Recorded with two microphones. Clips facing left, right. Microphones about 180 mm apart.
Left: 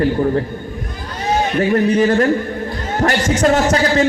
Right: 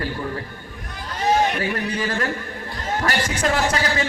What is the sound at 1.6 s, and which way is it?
Speech, 40° left (ahead or behind).